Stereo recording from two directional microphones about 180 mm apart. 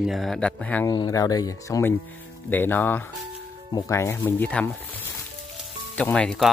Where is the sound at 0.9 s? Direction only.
20° left (ahead or behind).